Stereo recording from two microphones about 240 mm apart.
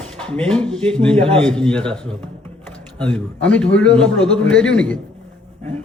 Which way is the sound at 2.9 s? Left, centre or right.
Centre.